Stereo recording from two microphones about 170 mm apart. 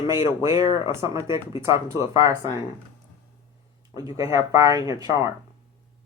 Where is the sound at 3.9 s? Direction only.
20° right (ahead or behind).